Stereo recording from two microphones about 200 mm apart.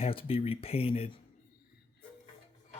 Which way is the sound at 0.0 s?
25° left (ahead or behind).